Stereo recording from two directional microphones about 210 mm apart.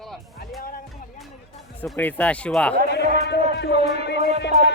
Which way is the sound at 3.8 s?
55° left (ahead or behind).